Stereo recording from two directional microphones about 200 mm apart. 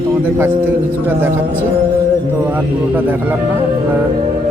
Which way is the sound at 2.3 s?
10° right (ahead or behind).